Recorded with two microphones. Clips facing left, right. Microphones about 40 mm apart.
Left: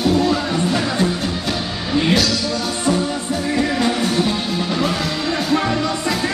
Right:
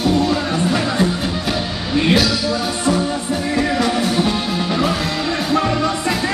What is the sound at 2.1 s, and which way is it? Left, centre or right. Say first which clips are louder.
Music: right 3 dB; centre.